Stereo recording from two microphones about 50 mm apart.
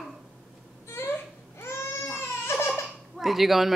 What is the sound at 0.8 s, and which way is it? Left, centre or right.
Baby cry, left.